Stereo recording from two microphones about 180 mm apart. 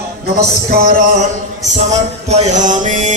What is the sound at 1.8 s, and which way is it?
Mantra, 40° right (ahead or behind).